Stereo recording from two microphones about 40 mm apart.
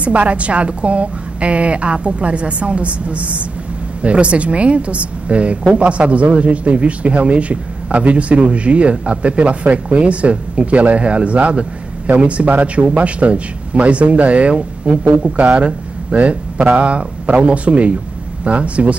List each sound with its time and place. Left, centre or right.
0.0 s a woman's voice: right